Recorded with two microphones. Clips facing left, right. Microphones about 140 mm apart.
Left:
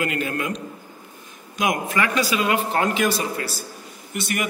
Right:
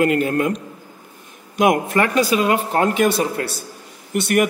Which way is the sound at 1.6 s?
55° right (ahead or behind).